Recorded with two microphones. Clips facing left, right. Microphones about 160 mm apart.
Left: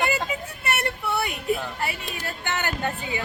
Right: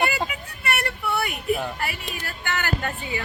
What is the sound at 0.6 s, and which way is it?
Child singing, 25° left (ahead or behind).